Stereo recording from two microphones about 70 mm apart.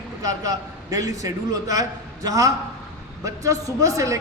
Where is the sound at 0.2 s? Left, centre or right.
Right.